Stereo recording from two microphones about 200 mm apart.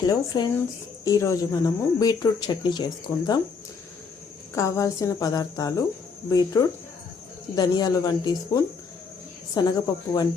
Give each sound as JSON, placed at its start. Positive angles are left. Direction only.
{"t": 0.1, "sound": "speech", "side_deg": 20}
{"t": 4.5, "sound": "speech", "side_deg": 15}